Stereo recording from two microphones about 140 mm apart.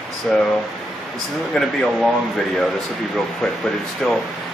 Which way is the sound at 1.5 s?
Centre (ahead or behind).